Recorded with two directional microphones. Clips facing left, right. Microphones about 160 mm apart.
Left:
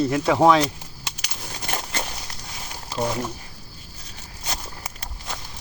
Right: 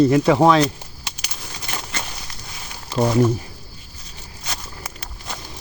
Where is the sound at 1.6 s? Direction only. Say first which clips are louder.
Left 2 dB; 45° left (ahead or behind).